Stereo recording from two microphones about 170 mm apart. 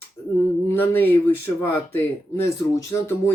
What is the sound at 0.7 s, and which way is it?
Speech, 10° left (ahead or behind).